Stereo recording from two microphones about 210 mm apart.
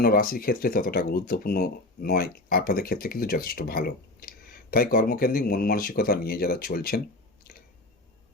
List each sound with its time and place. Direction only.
0.0 s speech: 45° left (ahead or behind)